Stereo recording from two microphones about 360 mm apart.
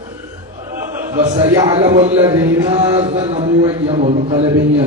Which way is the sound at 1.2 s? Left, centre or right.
Centre.